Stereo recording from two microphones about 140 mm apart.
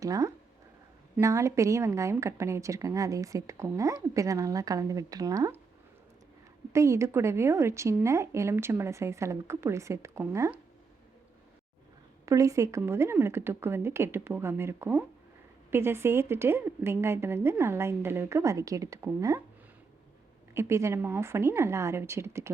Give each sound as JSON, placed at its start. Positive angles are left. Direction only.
{"t": 0.0, "sound": "a woman's voice", "side_deg": -25}
{"t": 6.7, "sound": "a woman's voice", "side_deg": -20}
{"t": 12.2, "sound": "a woman's voice", "side_deg": -25}
{"t": 20.5, "sound": "a woman's voice", "side_deg": -20}